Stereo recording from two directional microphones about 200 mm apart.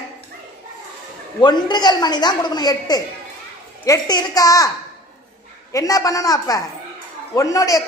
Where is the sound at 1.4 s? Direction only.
20° left (ahead or behind).